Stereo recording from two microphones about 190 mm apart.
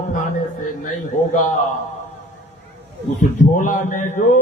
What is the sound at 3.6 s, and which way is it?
Speech, 45° left (ahead or behind).